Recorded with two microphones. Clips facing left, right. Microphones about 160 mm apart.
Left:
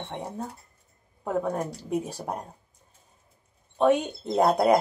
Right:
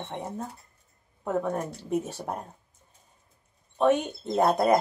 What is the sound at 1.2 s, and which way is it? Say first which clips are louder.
Speech: left 1 dB; centre (ahead or behind).